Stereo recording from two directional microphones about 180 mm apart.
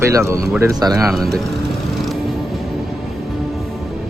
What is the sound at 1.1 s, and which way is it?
Speech, centre (ahead or behind).